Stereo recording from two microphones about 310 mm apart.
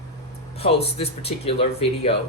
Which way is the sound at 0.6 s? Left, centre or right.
Centre.